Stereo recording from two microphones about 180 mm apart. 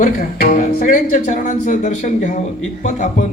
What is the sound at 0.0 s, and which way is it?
Speech, 50° left (ahead or behind).